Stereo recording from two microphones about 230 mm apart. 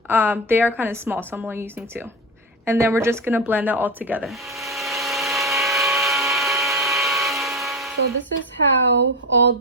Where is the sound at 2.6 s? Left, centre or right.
Centre.